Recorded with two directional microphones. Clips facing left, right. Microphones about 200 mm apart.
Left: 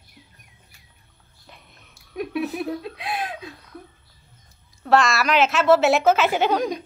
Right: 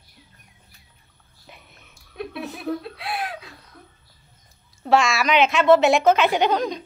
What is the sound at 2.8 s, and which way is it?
Speech, 20° left (ahead or behind).